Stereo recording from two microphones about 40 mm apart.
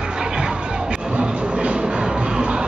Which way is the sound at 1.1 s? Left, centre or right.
Right.